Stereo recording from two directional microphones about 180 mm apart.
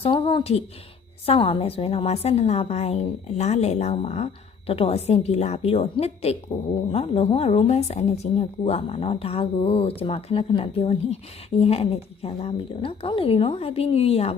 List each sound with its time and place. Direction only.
0.0 s a woman's voice: 30° left (ahead or behind)